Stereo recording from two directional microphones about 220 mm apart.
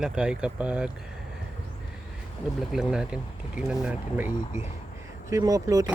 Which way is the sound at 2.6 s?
Centre (ahead or behind).